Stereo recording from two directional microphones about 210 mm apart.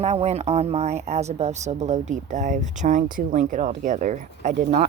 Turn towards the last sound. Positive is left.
turn(degrees=-35)  # may be behind; listen again after turning